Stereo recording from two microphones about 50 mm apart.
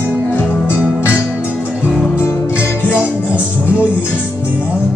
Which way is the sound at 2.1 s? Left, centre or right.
Left.